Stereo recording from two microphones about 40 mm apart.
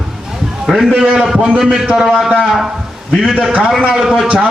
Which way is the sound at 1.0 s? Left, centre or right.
Centre.